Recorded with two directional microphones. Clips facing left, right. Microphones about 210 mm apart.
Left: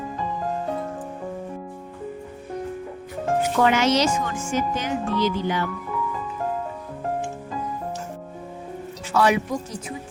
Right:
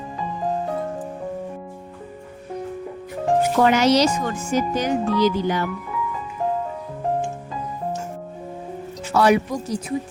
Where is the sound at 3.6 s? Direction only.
40° right (ahead or behind).